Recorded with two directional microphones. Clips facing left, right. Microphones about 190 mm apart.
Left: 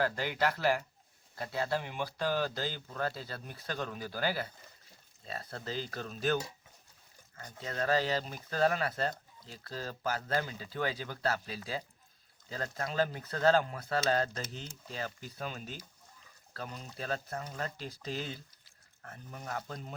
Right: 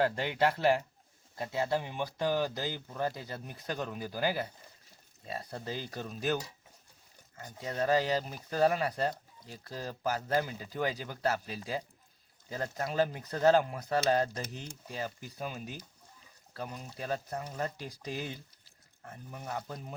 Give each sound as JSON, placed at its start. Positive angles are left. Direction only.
{"t": 0.0, "sound": "speech", "side_deg": -25}
{"t": 19.3, "sound": "speech", "side_deg": -10}